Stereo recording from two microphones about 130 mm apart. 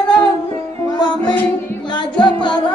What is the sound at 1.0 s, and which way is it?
Music, 35° left (ahead or behind).